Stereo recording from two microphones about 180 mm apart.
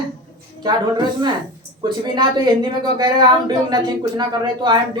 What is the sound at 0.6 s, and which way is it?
A woman's voice, 25° right (ahead or behind).